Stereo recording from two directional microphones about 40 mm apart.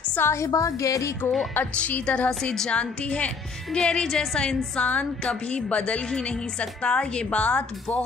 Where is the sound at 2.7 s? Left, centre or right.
Left.